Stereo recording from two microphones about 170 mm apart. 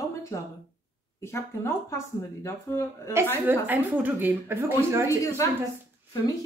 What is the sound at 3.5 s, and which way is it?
Speech, 10° right (ahead or behind).